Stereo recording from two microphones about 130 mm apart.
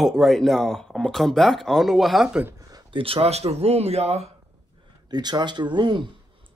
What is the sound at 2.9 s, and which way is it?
Speech, 45° right (ahead or behind).